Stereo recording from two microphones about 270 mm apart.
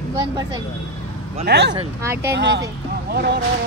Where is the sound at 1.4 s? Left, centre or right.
Right.